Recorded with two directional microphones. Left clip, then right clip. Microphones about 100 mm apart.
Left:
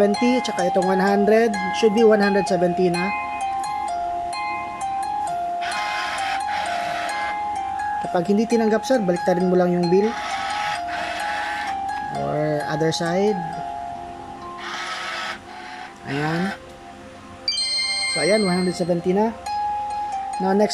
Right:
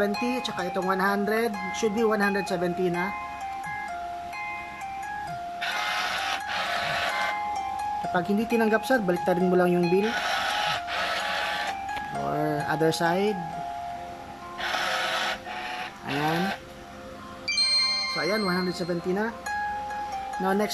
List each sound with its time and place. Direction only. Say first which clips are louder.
0.2 s cowbell: left 8 dB; 20° left (ahead or behind)
1.7 s speech: left 10 dB; 10° left (ahead or behind)
8.0 s speech: left 6 dB; 5° left (ahead or behind)
12.1 s livestock: left 4 dB; 10° left (ahead or behind)
12.4 s music: left 3 dB; centre (ahead or behind)
16.1 s speech: left 2 dB; centre (ahead or behind)
17.5 s speech: left 1 dB; 15° left (ahead or behind)
20.4 s speech: left 7 dB; 5° left (ahead or behind)